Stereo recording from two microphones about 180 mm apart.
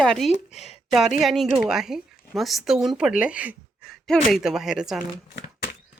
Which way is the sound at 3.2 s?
5° right (ahead or behind).